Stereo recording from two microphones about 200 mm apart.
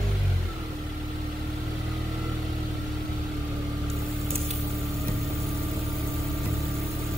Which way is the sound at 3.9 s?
30° right (ahead or behind).